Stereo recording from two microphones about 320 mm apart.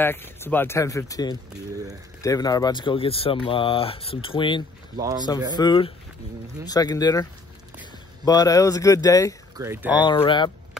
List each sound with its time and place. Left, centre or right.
0.0 s speech: centre
4.9 s speech: centre
5.6 s speech: centre
8.3 s speech: centre
9.6 s speech: centre
9.9 s speech: centre